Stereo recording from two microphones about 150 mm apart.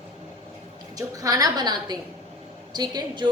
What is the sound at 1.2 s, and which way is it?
A woman's voice, 25° right (ahead or behind).